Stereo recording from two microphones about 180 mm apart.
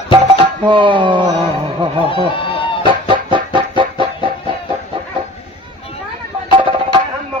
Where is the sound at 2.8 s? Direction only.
25° right (ahead or behind).